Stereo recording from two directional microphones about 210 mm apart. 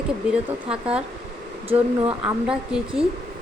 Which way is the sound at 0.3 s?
5° right (ahead or behind).